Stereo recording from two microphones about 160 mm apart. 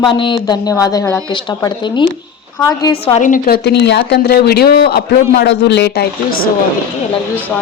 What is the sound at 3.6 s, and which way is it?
Speech, 90° left.